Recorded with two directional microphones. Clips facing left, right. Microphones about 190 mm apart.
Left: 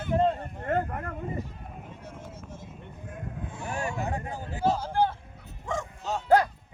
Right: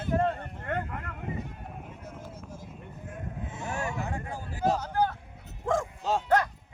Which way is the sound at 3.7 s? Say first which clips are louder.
Left 2 dB; 15° left (ahead or behind).